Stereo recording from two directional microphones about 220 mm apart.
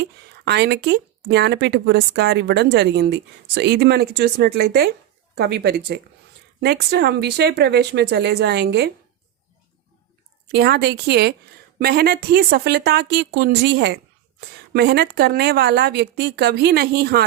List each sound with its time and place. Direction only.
0.0 s speech: 50° right (ahead or behind)
10.5 s speech: 45° right (ahead or behind)